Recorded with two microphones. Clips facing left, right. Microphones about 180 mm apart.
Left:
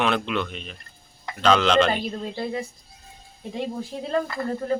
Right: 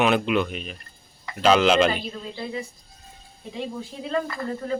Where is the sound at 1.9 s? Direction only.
45° left (ahead or behind).